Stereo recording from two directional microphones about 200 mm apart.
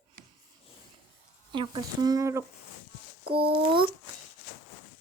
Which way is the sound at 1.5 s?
25° right (ahead or behind).